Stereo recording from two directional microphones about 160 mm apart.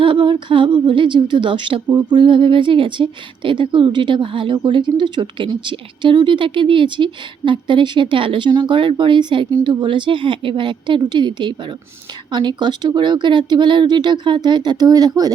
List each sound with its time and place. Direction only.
0.0 s speech: 30° right (ahead or behind)